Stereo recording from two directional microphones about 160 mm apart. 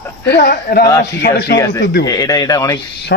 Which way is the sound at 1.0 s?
90° left.